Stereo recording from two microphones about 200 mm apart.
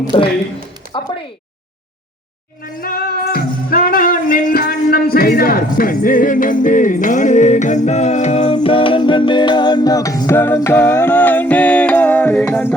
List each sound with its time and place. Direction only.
0.1 s a man's voice: 20° left (ahead or behind)
2.8 s music: 50° left (ahead or behind); by 12.7 s 10° left (ahead or behind)